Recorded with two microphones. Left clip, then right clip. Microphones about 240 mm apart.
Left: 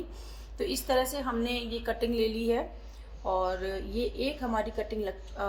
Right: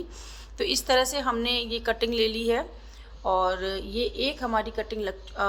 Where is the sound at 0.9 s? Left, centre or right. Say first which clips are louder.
Right 4 dB; right.